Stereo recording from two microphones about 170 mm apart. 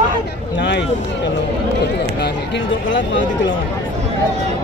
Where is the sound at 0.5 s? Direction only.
90° left.